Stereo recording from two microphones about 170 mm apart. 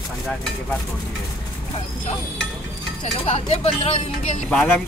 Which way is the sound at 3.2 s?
40° left (ahead or behind).